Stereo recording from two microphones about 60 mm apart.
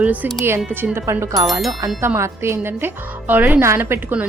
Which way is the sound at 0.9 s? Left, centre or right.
Right.